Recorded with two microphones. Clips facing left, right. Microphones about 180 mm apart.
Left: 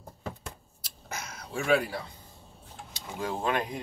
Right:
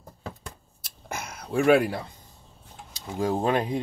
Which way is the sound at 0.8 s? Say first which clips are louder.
Right 4 dB; 55° right (ahead or behind).